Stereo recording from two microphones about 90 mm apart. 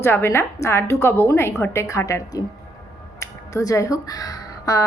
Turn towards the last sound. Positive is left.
turn(degrees=40)  # may be behind; listen again after turning